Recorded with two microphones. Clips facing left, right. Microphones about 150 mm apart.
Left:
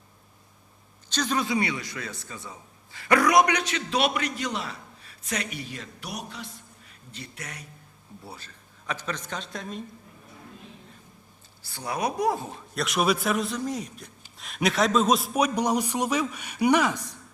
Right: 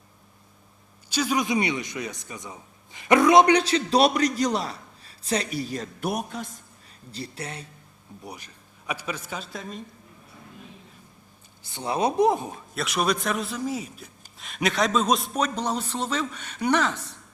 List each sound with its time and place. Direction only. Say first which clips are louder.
1.1 s a man's voice: right 2 dB; 10° right (ahead or behind); by 6.6 s 45° right (ahead or behind)
7.1 s a man's voice: right 6 dB; 35° right (ahead or behind)
8.2 s speech: right 4 dB; 15° right (ahead or behind)
11.6 s a woman's voice: right 4 dB; 20° right (ahead or behind)
12.7 s a man's voice: left 1 dB; centre (ahead or behind)